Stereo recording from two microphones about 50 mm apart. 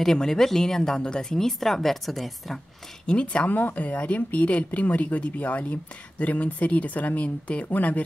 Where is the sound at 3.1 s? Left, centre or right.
Left.